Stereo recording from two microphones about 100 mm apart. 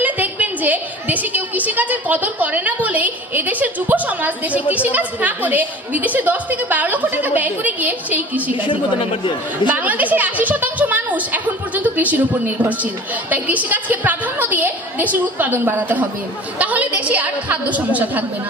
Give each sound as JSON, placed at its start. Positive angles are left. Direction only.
{"t": 0.0, "sound": "a woman's voice", "side_deg": -15}
{"t": 9.7, "sound": "a woman's voice", "side_deg": -15}